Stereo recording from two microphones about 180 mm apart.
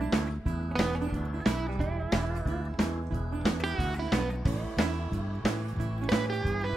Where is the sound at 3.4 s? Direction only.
Centre (ahead or behind).